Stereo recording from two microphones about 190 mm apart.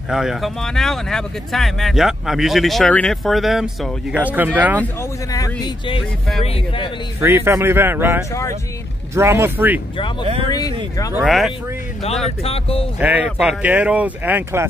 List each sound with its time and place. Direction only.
0.1 s speech: centre (ahead or behind)
5.3 s speech: 20° left (ahead or behind)
7.2 s speech: 10° right (ahead or behind)
11.1 s speech: centre (ahead or behind)
12.3 s speech: 30° left (ahead or behind)
13.0 s speech: 10° right (ahead or behind)